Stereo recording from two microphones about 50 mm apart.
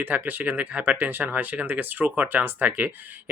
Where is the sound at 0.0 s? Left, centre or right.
Right.